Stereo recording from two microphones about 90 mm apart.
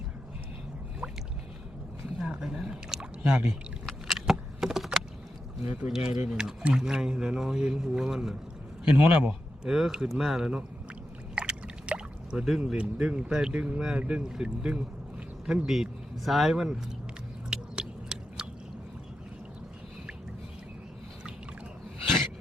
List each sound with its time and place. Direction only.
2.1 s speech: 10° right (ahead or behind)
3.8 s a sound: 5° right (ahead or behind)
5.8 s speech: 10° right (ahead or behind)
8.8 s speech: 15° right (ahead or behind)
9.6 s speech: 5° right (ahead or behind)
11.3 s a sound: 15° right (ahead or behind)
12.7 s speech: 15° right (ahead or behind)
17.5 s biting: 10° right (ahead or behind)